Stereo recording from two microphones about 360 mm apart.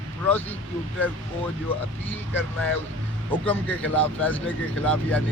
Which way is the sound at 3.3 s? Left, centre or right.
Centre.